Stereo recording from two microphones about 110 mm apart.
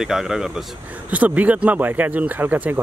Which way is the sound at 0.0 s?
5° right (ahead or behind).